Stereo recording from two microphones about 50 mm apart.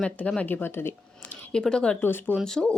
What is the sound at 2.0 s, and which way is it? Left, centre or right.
Speech, left.